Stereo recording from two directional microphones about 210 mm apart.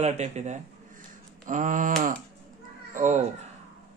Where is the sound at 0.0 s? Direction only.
30° right (ahead or behind).